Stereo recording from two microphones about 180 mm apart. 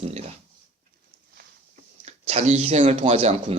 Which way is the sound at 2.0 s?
35° right (ahead or behind).